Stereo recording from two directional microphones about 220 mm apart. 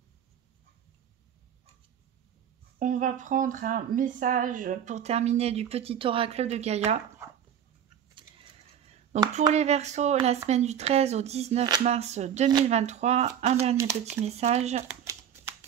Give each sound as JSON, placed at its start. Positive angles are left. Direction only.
{"t": 2.8, "sound": "speech", "side_deg": -35}
{"t": 8.1, "sound": "a sound", "side_deg": -20}
{"t": 9.5, "sound": "speech", "side_deg": -30}
{"t": 13.7, "sound": "speech", "side_deg": -15}
{"t": 14.2, "sound": "speech", "side_deg": -30}
{"t": 14.9, "sound": "shuffling cards", "side_deg": -10}